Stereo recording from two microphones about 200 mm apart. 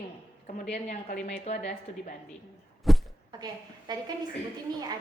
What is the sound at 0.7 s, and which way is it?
Speech, 50° left (ahead or behind).